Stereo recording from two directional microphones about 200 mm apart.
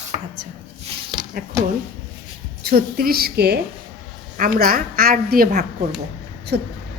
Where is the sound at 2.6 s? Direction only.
50° right (ahead or behind).